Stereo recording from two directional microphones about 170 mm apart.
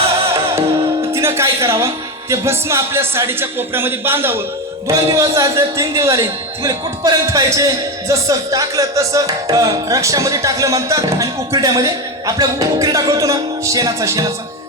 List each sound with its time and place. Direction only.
1.1 s a woman's voice: 15° right (ahead or behind)